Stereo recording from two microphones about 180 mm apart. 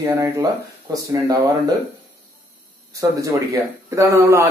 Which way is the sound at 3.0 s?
20° right (ahead or behind).